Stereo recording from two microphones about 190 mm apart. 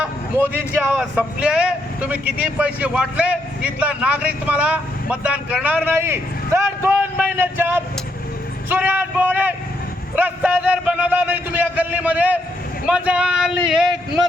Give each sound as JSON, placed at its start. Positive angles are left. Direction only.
{"t": 0.0, "sound": "a man's voice", "side_deg": -10}